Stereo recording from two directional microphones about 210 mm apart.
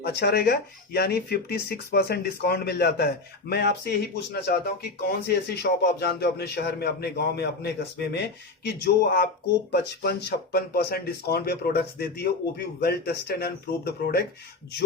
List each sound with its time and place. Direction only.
0.0 s speech: 50° left (ahead or behind)